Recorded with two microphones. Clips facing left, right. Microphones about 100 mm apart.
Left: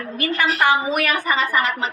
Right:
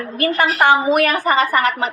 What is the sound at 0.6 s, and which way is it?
Speech, 30° right (ahead or behind).